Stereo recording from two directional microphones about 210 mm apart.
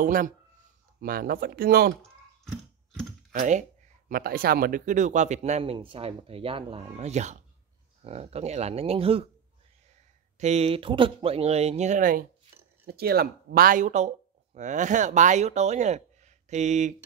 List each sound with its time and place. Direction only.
0.0 s speech: 40° right (ahead or behind)
2.4 s a sound: centre (ahead or behind)
3.3 s speech: 35° right (ahead or behind)
10.4 s speech: 30° right (ahead or behind)